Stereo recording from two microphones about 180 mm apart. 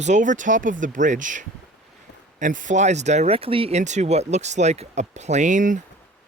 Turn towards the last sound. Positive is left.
turn(degrees=-45)  # may be behind; listen again after turning